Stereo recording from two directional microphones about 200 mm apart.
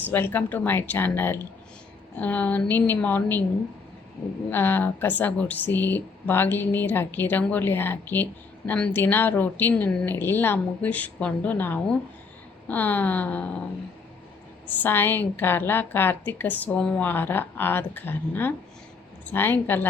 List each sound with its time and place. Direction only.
0.1 s speech: 10° left (ahead or behind)
4.4 s speech: 10° left (ahead or behind)
14.7 s speech: 10° left (ahead or behind)